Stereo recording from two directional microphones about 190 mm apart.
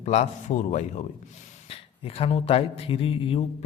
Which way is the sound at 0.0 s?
35° left (ahead or behind).